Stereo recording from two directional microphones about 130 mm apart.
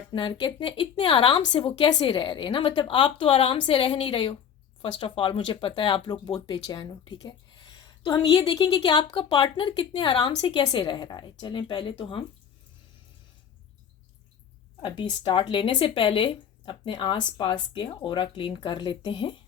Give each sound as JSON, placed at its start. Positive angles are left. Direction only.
{"t": 0.1, "sound": "a woman's voice", "side_deg": 40}
{"t": 14.8, "sound": "speech", "side_deg": 40}